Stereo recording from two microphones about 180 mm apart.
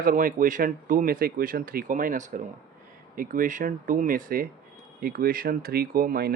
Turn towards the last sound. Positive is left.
turn(degrees=-55)  # may be behind; listen again after turning